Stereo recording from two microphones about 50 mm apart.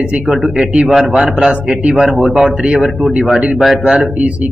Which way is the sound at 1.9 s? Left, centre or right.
Centre.